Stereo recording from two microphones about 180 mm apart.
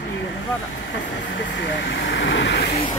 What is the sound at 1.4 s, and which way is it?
Speech, 85° left.